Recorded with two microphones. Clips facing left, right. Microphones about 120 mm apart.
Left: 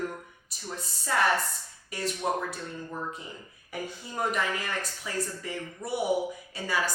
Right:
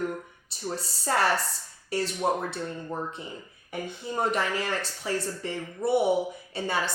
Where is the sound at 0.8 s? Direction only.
35° right (ahead or behind).